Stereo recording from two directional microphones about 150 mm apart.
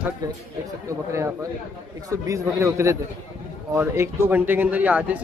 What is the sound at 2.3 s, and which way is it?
A man's voice, 20° right (ahead or behind).